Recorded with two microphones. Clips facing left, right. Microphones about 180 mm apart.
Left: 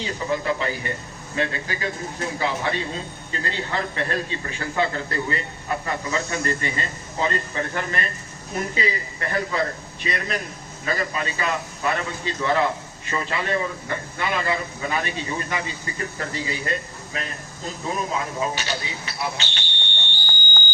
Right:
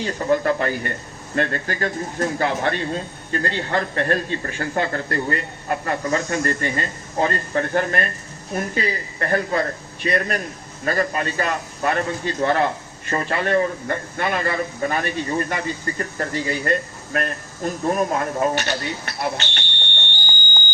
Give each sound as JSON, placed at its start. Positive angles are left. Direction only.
{"t": 0.0, "sound": "speech", "side_deg": -55}